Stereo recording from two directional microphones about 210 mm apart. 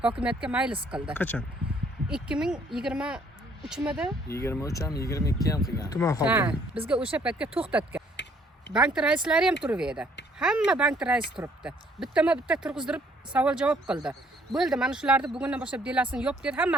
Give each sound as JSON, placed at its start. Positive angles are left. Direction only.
{"t": 0.2, "sound": "speech", "side_deg": -5}
{"t": 1.1, "sound": "speech", "side_deg": 5}
{"t": 2.0, "sound": "speech", "side_deg": -5}
{"t": 4.3, "sound": "speech", "side_deg": 15}
{"t": 6.2, "sound": "speech", "side_deg": -5}
{"t": 8.1, "sound": "a sound", "side_deg": 55}
{"t": 8.7, "sound": "speech", "side_deg": -5}